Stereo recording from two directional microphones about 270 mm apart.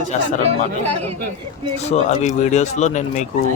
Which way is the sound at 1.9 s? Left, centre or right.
Left.